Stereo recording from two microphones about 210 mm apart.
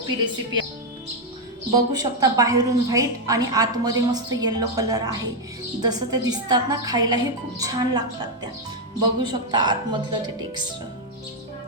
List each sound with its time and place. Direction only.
1.7 s a woman's voice: 20° right (ahead or behind)